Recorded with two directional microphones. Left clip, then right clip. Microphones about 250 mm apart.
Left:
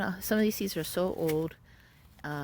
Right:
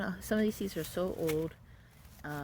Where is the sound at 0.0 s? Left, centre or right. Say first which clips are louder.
Left 4 dB; left.